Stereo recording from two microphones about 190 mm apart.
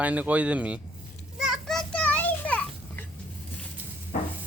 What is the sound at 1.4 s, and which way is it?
Children playing, centre (ahead or behind).